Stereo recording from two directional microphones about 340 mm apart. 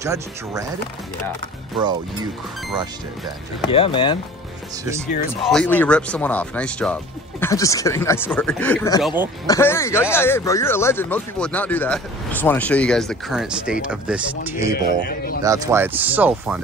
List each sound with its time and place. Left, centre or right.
0.0 s speech: centre
3.6 s speech: centre
5.4 s speech: centre
9.0 s speech: centre
9.5 s speech: centre
14.7 s speech: left
15.4 s speech: centre